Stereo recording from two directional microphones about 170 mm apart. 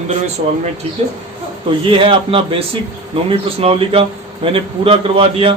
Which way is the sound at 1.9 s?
30° right (ahead or behind).